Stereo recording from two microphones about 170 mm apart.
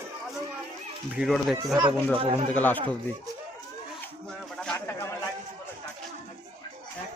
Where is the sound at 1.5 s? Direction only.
20° right (ahead or behind).